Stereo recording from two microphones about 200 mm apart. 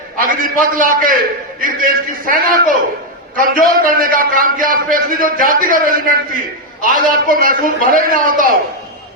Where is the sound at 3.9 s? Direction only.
45° right (ahead or behind).